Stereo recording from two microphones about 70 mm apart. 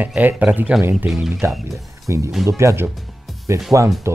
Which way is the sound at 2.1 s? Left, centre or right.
Right.